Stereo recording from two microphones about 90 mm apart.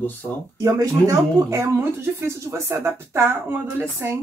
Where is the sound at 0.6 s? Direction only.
40° right (ahead or behind).